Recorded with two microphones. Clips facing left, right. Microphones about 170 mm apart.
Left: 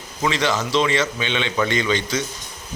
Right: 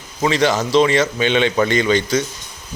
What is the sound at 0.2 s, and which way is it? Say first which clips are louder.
Speech: right 5 dB; 40° right (ahead or behind).